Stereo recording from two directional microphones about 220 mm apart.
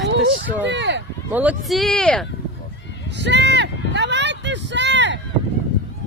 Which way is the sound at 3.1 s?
50° right (ahead or behind).